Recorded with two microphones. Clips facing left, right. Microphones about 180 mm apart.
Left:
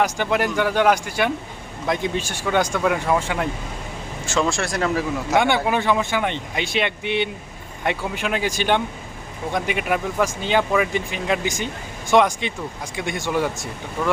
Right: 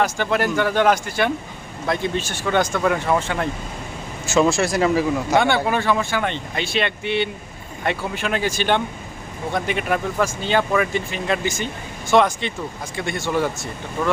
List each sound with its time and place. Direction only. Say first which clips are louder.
0.0 s speech: even; 15° left (ahead or behind)
4.3 s speech: right 5 dB; 5° right (ahead or behind)
5.6 s speech: even; 15° left (ahead or behind)